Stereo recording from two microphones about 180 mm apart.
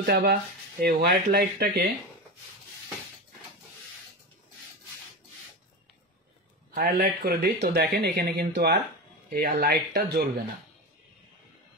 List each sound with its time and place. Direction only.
0.0 s speech: 65° right (ahead or behind)
6.7 s speech: 55° right (ahead or behind)